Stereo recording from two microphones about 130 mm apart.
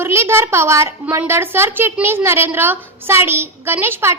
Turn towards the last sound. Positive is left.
turn(degrees=-20)  # may be behind; listen again after turning